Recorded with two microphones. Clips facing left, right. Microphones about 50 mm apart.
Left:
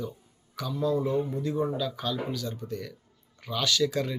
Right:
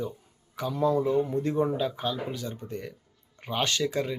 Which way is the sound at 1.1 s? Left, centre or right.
Right.